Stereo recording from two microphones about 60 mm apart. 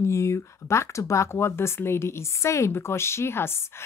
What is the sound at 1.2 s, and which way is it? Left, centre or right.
A woman's voice, left.